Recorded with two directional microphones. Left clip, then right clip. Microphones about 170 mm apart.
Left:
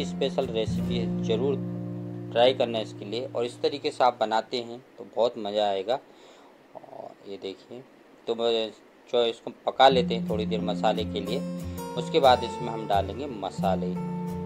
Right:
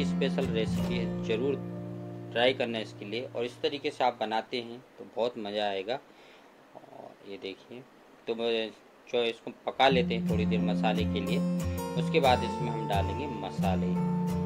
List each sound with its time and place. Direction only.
0.0 s speech: 15° left (ahead or behind)
7.2 s speech: 20° left (ahead or behind)
11.4 s music: centre (ahead or behind)
11.9 s speech: 15° left (ahead or behind)
13.9 s music: centre (ahead or behind)